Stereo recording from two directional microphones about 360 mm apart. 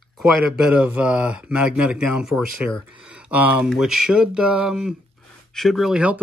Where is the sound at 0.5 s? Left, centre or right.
Centre.